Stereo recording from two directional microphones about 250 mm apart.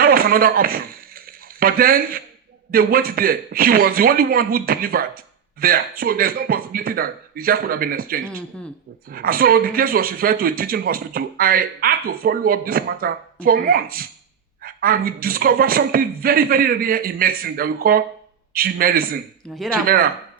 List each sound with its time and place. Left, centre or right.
0.0 s a sound: right
2.7 s speech: right
8.3 s speech: centre
9.0 s speech: right
19.4 s speech: centre
19.8 s speech: right